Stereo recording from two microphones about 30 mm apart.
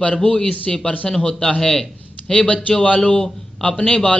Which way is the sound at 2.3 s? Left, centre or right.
Left.